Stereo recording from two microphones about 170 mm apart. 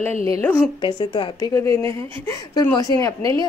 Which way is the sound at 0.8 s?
25° left (ahead or behind).